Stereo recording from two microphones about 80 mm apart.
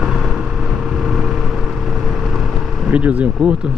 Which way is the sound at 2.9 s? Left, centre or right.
Centre.